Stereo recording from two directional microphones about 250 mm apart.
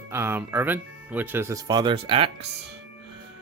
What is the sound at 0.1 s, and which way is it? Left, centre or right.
Speech, centre.